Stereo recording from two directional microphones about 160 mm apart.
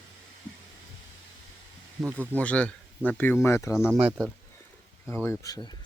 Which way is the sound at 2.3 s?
10° left (ahead or behind).